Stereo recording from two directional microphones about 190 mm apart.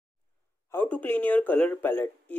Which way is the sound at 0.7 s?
10° left (ahead or behind).